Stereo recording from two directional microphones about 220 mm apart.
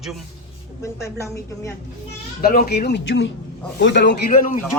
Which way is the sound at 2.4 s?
45° left (ahead or behind).